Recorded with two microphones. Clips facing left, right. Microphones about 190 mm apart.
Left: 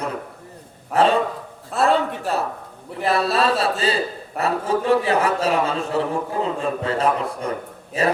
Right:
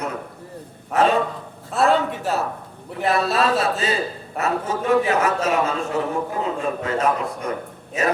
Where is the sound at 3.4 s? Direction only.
30° left (ahead or behind).